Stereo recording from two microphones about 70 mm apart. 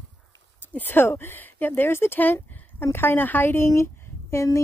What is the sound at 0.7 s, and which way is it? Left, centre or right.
A woman's voice, left.